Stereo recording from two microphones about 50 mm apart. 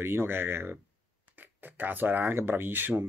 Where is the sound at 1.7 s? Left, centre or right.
Right.